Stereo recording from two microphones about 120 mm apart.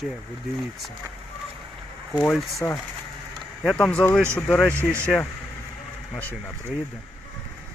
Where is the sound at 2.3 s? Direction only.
Centre (ahead or behind).